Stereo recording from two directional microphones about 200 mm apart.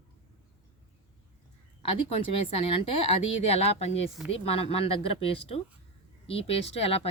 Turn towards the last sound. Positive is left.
turn(degrees=30)  # may be behind; listen again after turning